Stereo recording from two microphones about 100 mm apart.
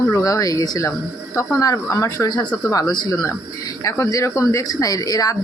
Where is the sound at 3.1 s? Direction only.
30° left (ahead or behind).